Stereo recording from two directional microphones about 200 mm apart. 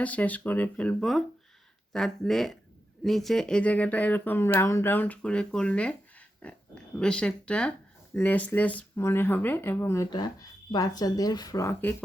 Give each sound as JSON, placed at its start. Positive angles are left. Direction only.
{"t": 0.0, "sound": "speech", "side_deg": 10}